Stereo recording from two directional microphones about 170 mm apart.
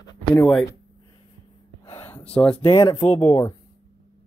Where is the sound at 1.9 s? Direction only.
15° left (ahead or behind).